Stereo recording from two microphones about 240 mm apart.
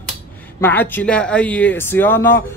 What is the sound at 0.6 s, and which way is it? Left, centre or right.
Speech, centre.